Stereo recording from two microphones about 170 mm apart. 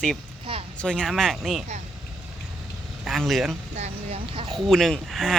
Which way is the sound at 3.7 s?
35° right (ahead or behind).